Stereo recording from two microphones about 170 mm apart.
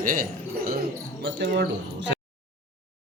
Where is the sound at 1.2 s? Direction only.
70° right (ahead or behind).